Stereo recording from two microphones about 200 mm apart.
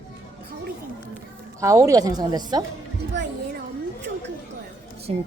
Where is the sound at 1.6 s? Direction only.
15° right (ahead or behind).